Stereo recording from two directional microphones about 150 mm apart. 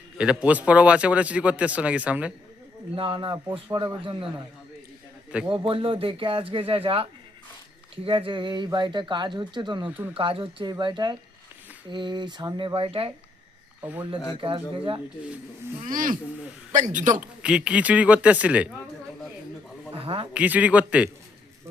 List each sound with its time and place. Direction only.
0.2 s a man's voice: 5° right (ahead or behind)
2.9 s speech: 35° right (ahead or behind)
5.6 s speech: 35° right (ahead or behind)
14.4 s speech: 35° right (ahead or behind)
15.8 s a man's voice: 65° right (ahead or behind)
17.2 s a man's voice: 5° right (ahead or behind)
20.3 s a man's voice: 10° right (ahead or behind)